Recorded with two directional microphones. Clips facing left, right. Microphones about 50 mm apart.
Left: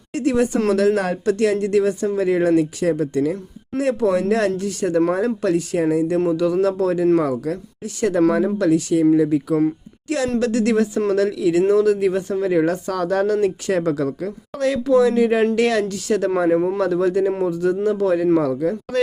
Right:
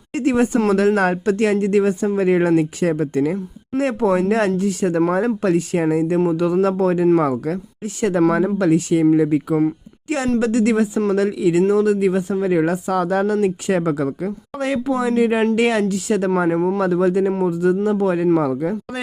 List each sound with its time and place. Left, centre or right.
0.3 s speech: right
10.4 s speech: centre
11.6 s speech: centre
16.5 s speech: centre
16.8 s speech: centre